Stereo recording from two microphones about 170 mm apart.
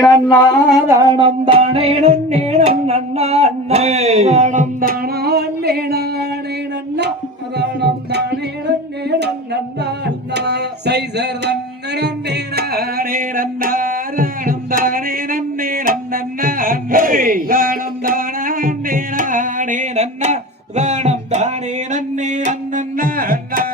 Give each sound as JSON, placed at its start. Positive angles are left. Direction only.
{"t": 0.0, "sound": "a sound", "side_deg": 20}
{"t": 0.9, "sound": "music", "side_deg": -20}
{"t": 7.5, "sound": "music", "side_deg": -75}
{"t": 10.3, "sound": "music", "side_deg": -75}
{"t": 15.9, "sound": "speech", "side_deg": -55}
{"t": 21.9, "sound": "music", "side_deg": -45}